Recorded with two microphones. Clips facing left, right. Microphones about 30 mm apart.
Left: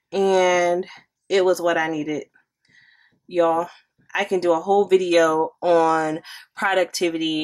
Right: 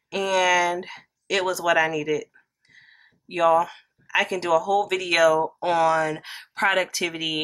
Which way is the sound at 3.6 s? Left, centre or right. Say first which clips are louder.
Left 1 dB; centre.